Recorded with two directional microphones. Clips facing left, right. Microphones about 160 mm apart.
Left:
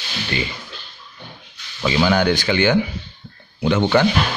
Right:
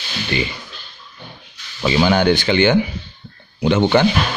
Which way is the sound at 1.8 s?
25° right (ahead or behind).